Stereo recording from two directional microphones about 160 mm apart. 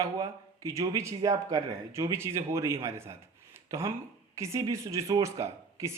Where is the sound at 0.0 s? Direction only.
20° right (ahead or behind).